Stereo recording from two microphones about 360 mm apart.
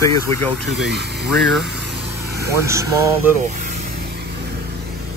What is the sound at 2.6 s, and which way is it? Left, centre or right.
Speech, centre.